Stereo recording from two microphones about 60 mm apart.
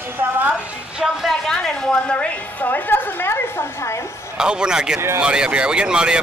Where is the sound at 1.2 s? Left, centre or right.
Centre.